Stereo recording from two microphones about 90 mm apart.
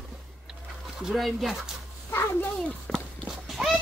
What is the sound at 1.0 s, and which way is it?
Speech, centre (ahead or behind).